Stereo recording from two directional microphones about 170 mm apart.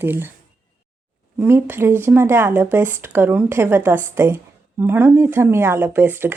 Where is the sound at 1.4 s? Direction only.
15° right (ahead or behind).